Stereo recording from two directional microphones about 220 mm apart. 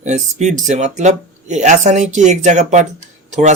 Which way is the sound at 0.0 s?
30° right (ahead or behind).